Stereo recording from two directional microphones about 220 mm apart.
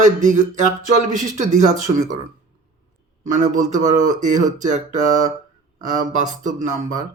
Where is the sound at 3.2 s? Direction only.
35° right (ahead or behind).